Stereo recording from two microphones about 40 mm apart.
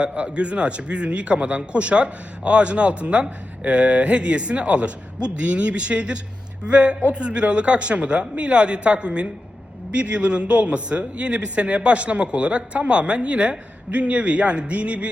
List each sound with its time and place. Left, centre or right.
0.0 s a man's voice: right